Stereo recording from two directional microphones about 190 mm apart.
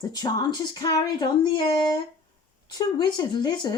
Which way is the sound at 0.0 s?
20° left (ahead or behind).